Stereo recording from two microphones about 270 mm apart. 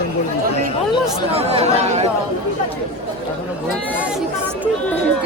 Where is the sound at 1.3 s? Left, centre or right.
Right.